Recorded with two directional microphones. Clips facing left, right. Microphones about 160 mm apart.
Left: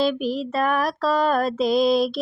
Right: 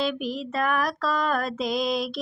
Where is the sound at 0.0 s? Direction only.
35° left (ahead or behind).